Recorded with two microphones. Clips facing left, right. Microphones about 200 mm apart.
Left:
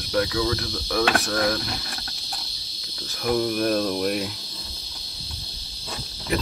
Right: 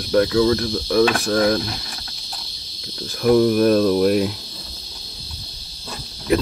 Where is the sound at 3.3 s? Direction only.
50° right (ahead or behind).